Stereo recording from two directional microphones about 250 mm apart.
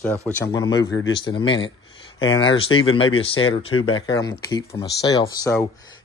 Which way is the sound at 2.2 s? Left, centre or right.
Left.